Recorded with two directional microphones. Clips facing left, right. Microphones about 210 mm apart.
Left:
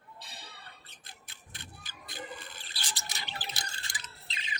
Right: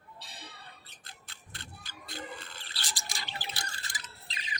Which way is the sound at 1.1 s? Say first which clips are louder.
Right 1 dB; 15° left (ahead or behind).